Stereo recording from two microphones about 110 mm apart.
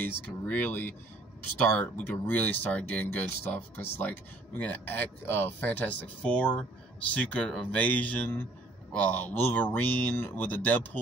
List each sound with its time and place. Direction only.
0.0 s speech: 15° left (ahead or behind)